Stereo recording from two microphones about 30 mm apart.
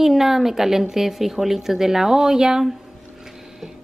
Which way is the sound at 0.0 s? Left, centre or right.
Centre.